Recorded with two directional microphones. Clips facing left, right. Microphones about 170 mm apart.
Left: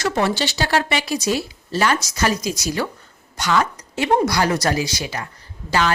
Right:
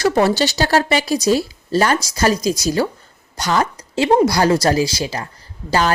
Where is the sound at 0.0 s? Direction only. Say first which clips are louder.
Right 5 dB; 35° right (ahead or behind).